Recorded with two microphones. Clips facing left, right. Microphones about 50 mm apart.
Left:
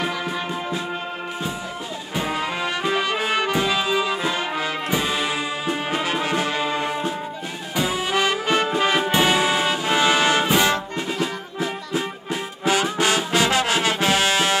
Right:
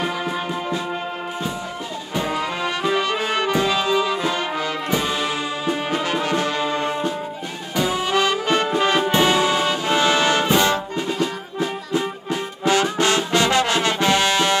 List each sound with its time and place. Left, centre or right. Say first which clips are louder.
2.1 s music: right 1 dB; centre
3.5 s music: right 2 dB; centre